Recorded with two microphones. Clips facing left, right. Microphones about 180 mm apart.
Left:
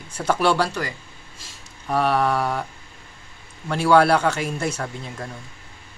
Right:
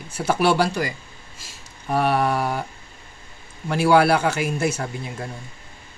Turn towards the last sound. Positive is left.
turn(degrees=-5)  # may be behind; listen again after turning